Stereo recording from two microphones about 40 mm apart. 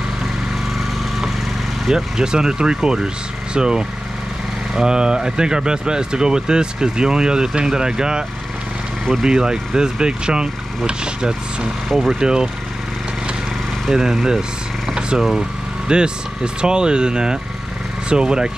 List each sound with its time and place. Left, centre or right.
1.9 s speech: centre
9.2 s speech: centre
13.8 s speech: centre
14.9 s a sound: centre
15.9 s speech: right